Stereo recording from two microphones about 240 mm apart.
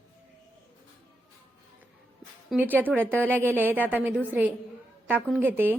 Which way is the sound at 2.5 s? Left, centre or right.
Centre.